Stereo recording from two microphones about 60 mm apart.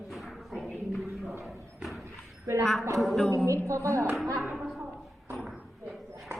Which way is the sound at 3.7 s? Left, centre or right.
Right.